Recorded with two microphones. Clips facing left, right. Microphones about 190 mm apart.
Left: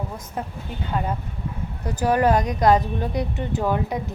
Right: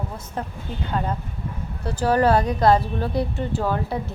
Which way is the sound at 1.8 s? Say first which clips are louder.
Right 1 dB; 15° left (ahead or behind).